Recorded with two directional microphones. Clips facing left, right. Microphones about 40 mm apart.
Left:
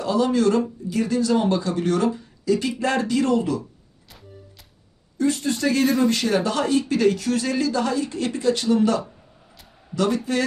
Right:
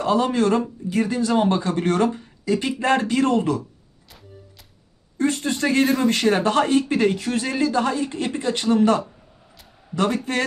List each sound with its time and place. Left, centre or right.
0.0 s speech: right
5.1 s speech: right